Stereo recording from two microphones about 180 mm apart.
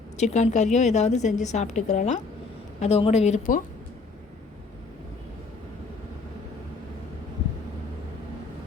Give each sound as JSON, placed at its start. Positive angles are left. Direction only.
{"t": 0.2, "sound": "a woman's voice", "side_deg": 40}